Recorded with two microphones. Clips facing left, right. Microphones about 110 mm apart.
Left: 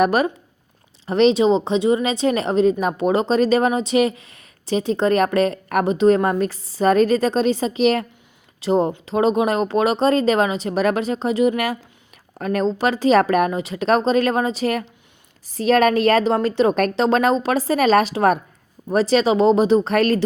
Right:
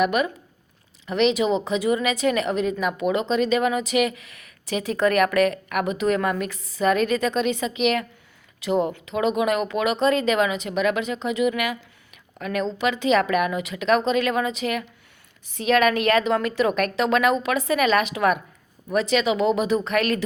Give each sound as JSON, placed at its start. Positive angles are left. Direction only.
{"t": 0.0, "sound": "speech", "side_deg": 35}